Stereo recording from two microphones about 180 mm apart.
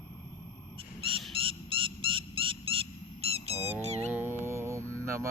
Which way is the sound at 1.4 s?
30° right (ahead or behind).